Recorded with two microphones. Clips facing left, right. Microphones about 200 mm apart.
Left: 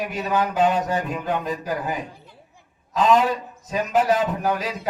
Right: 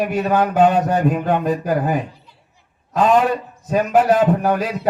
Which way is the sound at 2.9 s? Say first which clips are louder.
Right 3 dB; 55° right (ahead or behind).